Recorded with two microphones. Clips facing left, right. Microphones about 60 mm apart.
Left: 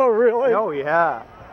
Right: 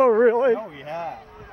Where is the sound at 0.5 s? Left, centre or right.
Left.